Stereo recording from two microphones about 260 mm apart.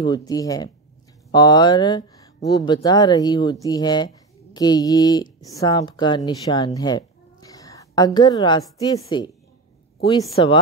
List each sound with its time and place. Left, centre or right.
0.0 s a woman's voice: centre
10.4 s a woman's voice: centre